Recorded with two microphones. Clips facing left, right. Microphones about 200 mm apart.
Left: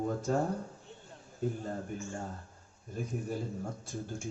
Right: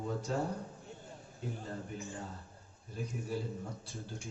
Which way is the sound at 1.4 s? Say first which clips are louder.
Left 8 dB; 45° left (ahead or behind).